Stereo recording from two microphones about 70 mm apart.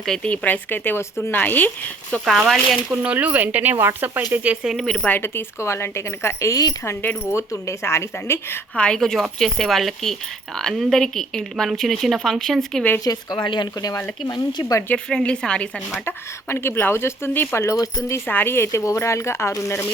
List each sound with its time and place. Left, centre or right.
0.0 s speech: centre
0.3 s a woman's voice: left
2.9 s speech: centre
4.6 s speech: centre
5.0 s speech: left
8.7 s speech: centre
13.1 s speech: left
14.3 s speech: left
14.9 s speech: centre
16.0 s speech: left
17.7 s speech: left
18.3 s speech: left